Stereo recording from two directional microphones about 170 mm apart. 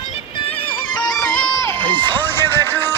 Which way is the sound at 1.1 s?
5° left (ahead or behind).